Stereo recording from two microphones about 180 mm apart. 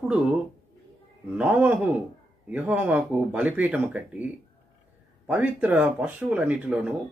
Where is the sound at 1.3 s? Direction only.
10° right (ahead or behind).